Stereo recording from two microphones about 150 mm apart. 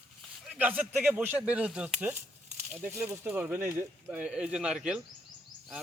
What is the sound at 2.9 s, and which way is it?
Speech, 15° right (ahead or behind).